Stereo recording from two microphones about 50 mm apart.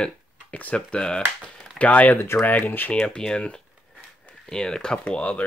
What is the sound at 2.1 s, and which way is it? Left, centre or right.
Speech, left.